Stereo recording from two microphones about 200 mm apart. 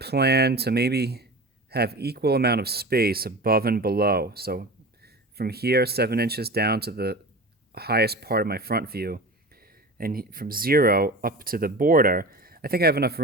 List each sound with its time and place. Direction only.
0.0 s speech: 55° right (ahead or behind)